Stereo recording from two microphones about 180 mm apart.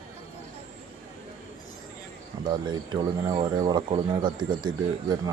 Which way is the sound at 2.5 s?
25° right (ahead or behind).